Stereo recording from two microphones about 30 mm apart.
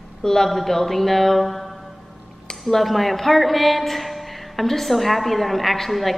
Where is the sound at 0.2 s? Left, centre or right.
Centre.